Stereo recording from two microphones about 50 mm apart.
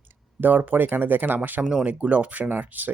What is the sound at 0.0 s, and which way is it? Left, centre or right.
Speech, right.